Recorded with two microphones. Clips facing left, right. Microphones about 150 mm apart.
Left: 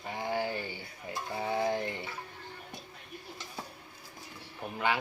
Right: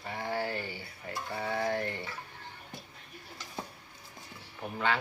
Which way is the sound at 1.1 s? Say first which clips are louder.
Left 1 dB; 20° left (ahead or behind).